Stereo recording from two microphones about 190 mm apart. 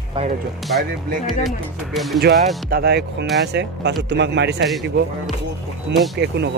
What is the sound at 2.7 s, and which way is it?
Speech, 60° right (ahead or behind).